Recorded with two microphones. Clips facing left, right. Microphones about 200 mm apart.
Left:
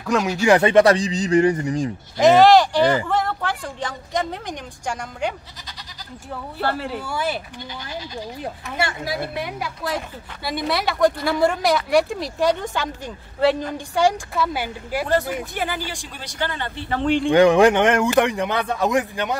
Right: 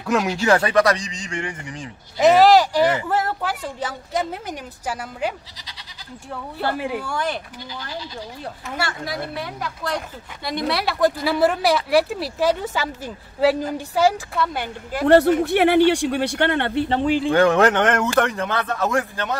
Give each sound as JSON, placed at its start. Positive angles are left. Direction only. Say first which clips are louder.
{"t": 0.0, "sound": "speech", "louder": "even", "side_deg": 0}
{"t": 0.4, "sound": "a man's voice", "louder": "left 5 dB", "side_deg": 20}
{"t": 2.1, "sound": "a woman's voice", "louder": "left 1 dB", "side_deg": -5}
{"t": 6.6, "sound": "a woman's voice", "louder": "right 1 dB", "side_deg": -10}
{"t": 7.1, "sound": "speech", "louder": "even", "side_deg": 5}
{"t": 8.7, "sound": "speech", "louder": "left 2 dB", "side_deg": 25}
{"t": 15.0, "sound": "speech", "louder": "right 11 dB", "side_deg": -70}
{"t": 17.0, "sound": "speech", "louder": "left 4 dB", "side_deg": -5}
{"t": 17.3, "sound": "speech", "louder": "left 4 dB", "side_deg": 15}